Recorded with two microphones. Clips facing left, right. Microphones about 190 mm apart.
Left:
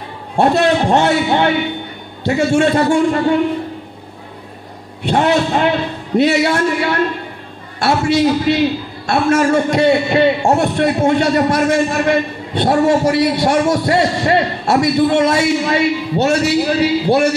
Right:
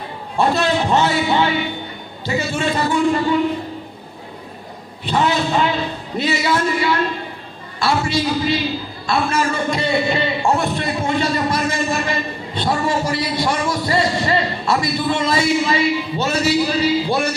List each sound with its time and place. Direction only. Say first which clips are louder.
0.9 s a man's voice: left 3 dB; 60° left (ahead or behind)
5.0 s a man's voice: left 4 dB; 65° left (ahead or behind)